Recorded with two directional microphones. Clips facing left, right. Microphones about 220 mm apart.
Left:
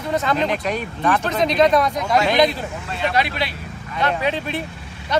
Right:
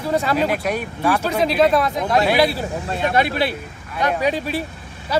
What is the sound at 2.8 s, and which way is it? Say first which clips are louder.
Speech: right 2 dB; 50° right (ahead or behind).